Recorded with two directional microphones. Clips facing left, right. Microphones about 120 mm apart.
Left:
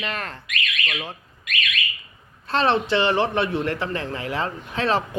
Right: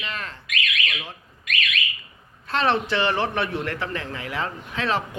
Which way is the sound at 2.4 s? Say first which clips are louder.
Left 2 dB; 30° left (ahead or behind).